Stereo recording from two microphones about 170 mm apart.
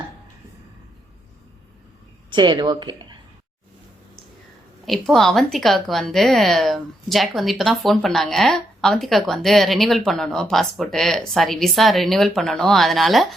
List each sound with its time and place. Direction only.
2.3 s speech: 25° right (ahead or behind)
4.9 s a woman's voice: centre (ahead or behind)